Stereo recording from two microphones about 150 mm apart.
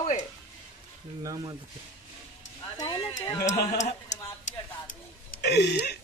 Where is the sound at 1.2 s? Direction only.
25° right (ahead or behind).